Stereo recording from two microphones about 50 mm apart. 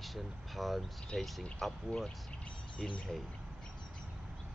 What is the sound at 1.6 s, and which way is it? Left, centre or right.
Speech, centre.